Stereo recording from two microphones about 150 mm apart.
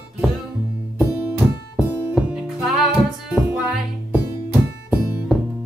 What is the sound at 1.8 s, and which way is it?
Music, 15° right (ahead or behind).